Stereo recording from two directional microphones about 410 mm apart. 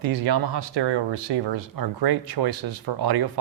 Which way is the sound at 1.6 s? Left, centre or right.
Right.